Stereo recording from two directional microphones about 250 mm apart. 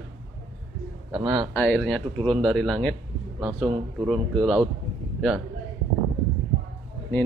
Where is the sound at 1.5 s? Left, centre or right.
Centre.